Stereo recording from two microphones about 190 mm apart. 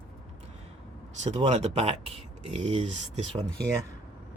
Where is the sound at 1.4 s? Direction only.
35° right (ahead or behind).